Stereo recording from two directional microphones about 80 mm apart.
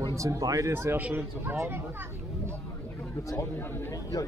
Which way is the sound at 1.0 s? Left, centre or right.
Centre.